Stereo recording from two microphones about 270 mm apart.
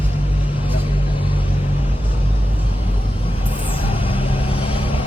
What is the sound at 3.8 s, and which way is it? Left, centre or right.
Vehicle, centre.